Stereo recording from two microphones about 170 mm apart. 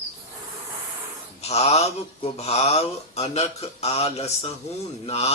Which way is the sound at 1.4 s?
40° left (ahead or behind).